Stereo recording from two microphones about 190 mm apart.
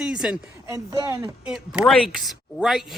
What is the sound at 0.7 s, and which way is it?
Speech, 15° right (ahead or behind).